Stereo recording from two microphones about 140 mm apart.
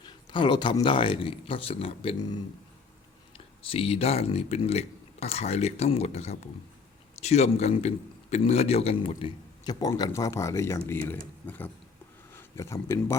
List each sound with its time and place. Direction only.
0.0 s speech: 35° left (ahead or behind)
3.3 s speech: 40° left (ahead or behind)
9.8 s speech: 25° left (ahead or behind)